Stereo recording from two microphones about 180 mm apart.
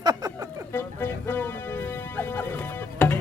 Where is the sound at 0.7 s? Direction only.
10° left (ahead or behind).